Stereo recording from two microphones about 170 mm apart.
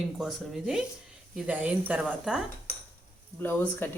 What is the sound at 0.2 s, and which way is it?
Speech, centre (ahead or behind).